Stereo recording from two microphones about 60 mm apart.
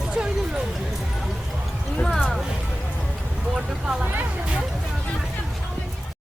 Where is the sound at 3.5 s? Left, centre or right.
Centre.